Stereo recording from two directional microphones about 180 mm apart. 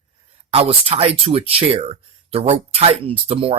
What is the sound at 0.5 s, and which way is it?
Speech, 30° right (ahead or behind).